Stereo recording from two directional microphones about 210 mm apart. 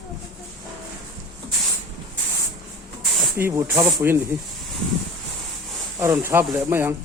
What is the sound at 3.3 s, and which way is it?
Speech, 10° right (ahead or behind).